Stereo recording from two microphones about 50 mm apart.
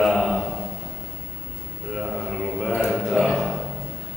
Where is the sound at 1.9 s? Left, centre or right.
Centre.